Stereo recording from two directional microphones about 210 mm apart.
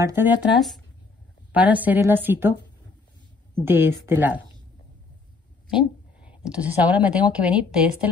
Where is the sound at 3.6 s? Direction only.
10° right (ahead or behind).